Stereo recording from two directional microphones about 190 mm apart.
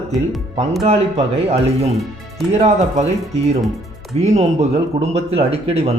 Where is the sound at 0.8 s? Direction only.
35° right (ahead or behind).